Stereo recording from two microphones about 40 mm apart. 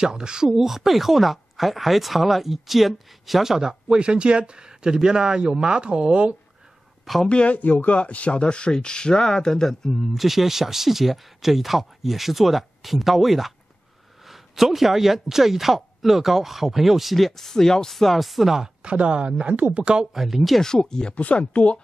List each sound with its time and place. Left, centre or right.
0.0 s speech: centre
0.5 s speech: centre
4.0 s speech: right
7.2 s speech: left; by 9.9 s centre
10.1 s speech: centre
18.8 s speech: right
20.2 s speech: centre
20.6 s speech: centre
21.1 s speech: left